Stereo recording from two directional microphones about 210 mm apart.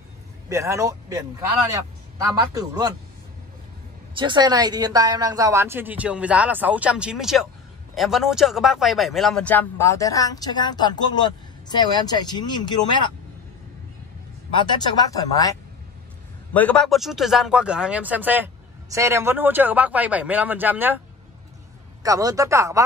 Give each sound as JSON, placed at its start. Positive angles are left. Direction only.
{"t": 0.5, "sound": "a man's voice", "side_deg": -15}
{"t": 4.1, "sound": "speech", "side_deg": -20}
{"t": 14.7, "sound": "speech", "side_deg": 20}
{"t": 16.5, "sound": "speech", "side_deg": 5}
{"t": 22.0, "sound": "speech", "side_deg": -15}